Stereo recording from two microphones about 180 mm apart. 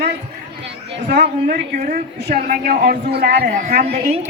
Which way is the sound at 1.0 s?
70° right (ahead or behind).